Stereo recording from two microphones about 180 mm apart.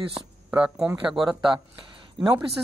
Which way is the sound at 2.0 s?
25° right (ahead or behind).